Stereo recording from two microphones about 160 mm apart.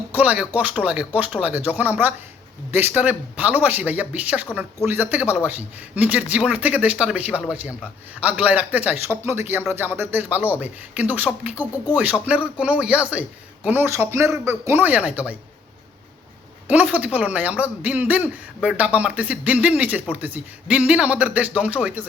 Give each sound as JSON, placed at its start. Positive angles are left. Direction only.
{"t": 0.1, "sound": "speech", "side_deg": -10}
{"t": 16.6, "sound": "speech", "side_deg": -10}